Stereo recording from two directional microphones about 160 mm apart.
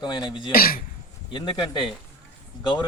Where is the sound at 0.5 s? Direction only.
65° left (ahead or behind).